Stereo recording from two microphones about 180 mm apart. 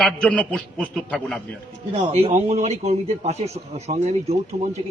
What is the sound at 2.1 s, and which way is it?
A man's voice, 35° right (ahead or behind).